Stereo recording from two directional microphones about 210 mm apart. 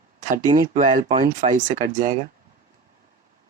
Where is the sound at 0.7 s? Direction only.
40° right (ahead or behind).